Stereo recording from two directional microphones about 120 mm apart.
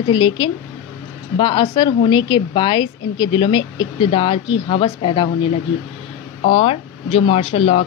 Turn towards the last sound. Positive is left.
turn(degrees=55)  # may be behind; listen again after turning